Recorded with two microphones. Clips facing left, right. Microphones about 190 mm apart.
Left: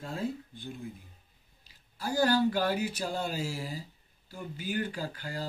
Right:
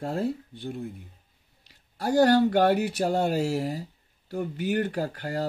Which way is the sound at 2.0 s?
65° right (ahead or behind).